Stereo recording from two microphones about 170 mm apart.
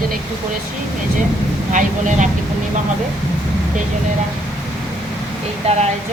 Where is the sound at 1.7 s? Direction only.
50° right (ahead or behind).